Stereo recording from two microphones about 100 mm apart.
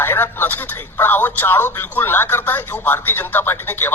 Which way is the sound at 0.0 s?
20° left (ahead or behind).